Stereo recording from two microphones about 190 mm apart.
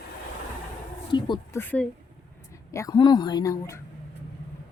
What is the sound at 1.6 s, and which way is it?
A woman's voice, 10° left (ahead or behind).